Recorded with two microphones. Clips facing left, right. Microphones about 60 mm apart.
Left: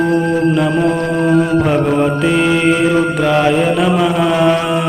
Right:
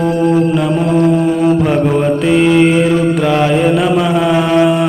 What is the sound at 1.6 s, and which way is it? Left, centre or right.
Mantra, centre.